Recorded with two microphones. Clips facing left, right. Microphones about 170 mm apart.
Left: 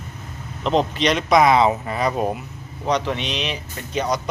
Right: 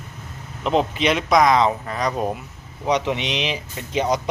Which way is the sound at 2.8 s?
15° right (ahead or behind).